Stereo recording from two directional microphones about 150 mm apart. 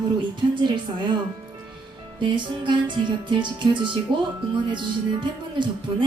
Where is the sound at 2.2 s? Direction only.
30° right (ahead or behind).